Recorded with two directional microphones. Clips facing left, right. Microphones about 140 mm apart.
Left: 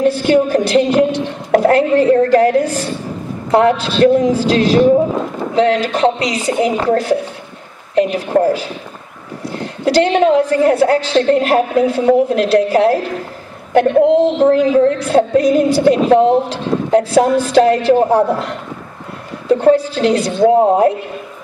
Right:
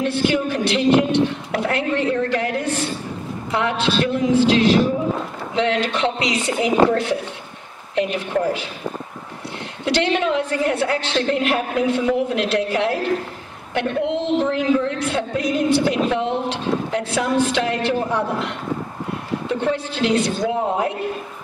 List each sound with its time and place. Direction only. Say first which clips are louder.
0.0 s music: left 7 dB; 40° left (ahead or behind)